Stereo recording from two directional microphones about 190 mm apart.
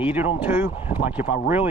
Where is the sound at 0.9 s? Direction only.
35° left (ahead or behind).